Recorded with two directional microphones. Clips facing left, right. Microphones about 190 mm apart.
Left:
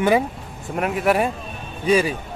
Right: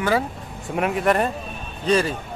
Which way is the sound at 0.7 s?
Centre (ahead or behind).